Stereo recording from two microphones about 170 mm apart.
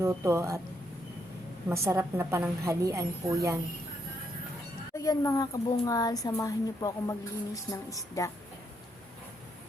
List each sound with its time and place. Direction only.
0.0 s a woman's voice: 15° right (ahead or behind)
1.7 s a woman's voice: 15° right (ahead or behind)
4.9 s speech: 20° left (ahead or behind)